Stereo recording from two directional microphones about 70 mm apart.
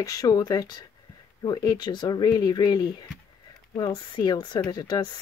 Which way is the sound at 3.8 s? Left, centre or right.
Left.